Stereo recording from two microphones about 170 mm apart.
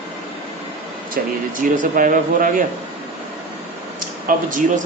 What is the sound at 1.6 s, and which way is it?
Speech, 50° right (ahead or behind).